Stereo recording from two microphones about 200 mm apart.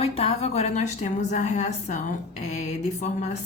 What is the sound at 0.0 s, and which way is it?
A woman's voice, 30° left (ahead or behind).